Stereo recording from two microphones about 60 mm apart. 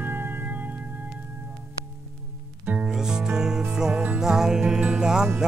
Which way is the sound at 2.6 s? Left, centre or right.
Right.